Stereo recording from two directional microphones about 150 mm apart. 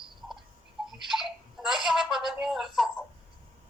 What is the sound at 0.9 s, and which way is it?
Telephone, centre (ahead or behind).